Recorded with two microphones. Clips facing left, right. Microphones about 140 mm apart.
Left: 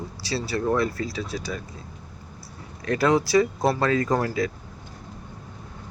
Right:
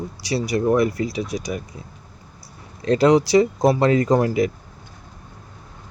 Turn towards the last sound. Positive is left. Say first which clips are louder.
# right 6 dB
turn(degrees=-20)  # may be behind; listen again after turning